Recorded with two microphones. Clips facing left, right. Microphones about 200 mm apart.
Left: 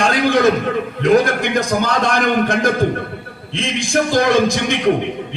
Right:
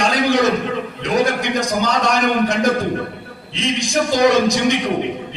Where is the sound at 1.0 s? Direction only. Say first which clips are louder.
Left 4 dB; 55° left (ahead or behind).